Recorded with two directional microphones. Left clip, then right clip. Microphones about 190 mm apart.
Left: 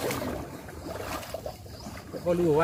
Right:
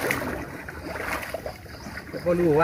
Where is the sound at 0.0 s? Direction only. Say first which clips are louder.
Right 4 dB; 10° right (ahead or behind).